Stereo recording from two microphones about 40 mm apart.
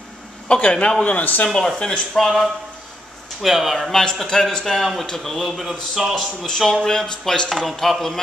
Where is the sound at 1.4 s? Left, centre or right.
Centre.